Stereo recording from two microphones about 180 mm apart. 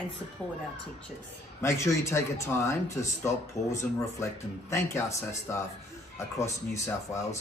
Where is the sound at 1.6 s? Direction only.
15° left (ahead or behind).